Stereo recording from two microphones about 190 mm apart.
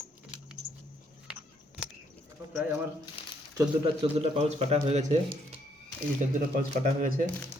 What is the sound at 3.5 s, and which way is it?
Speech, 20° right (ahead or behind).